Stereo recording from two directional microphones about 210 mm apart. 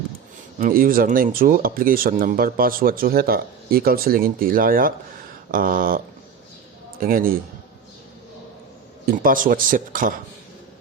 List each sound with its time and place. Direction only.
0.6 s speech: 45° right (ahead or behind)
7.0 s speech: 45° right (ahead or behind)
9.0 s speech: 40° right (ahead or behind)